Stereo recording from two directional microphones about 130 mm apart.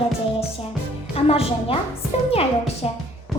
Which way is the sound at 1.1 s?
50° left (ahead or behind).